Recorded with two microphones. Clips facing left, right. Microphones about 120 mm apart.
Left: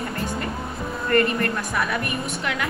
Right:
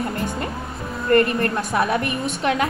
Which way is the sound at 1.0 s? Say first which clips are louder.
Right 3 dB; 25° right (ahead or behind).